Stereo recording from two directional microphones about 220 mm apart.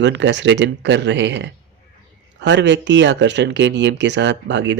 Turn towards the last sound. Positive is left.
turn(degrees=-55)  # may be behind; listen again after turning